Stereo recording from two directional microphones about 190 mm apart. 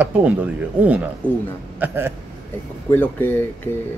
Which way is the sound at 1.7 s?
10° right (ahead or behind).